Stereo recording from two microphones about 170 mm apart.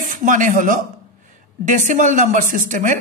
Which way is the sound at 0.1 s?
50° right (ahead or behind).